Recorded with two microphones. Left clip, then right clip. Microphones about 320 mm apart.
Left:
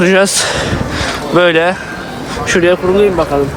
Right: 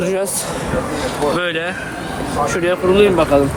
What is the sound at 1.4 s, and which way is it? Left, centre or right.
Speech, centre.